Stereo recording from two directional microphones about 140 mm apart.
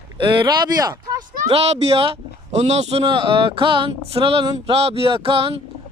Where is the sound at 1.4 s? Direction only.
50° right (ahead or behind).